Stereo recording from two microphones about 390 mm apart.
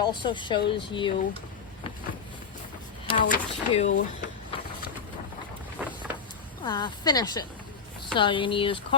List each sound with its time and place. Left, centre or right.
0.0 s speech: centre
3.1 s speech: centre
3.8 s speech: left
5.8 s vehicle: centre
6.7 s speech: centre